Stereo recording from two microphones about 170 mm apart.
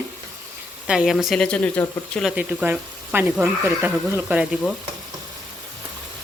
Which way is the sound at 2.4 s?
10° right (ahead or behind).